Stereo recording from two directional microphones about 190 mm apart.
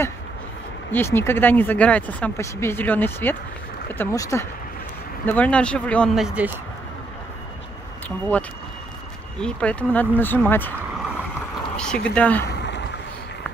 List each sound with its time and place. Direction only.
0.9 s speech: 10° left (ahead or behind); by 6.5 s 5° right (ahead or behind)
9.4 s speech: 5° left (ahead or behind)
11.7 s speech: 5° left (ahead or behind)
12.4 s boat: 65° left (ahead or behind)